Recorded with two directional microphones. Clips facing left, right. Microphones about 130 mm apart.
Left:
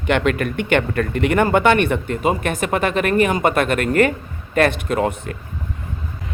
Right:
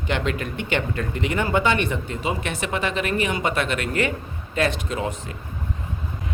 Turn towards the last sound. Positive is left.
turn(degrees=60)  # may be behind; listen again after turning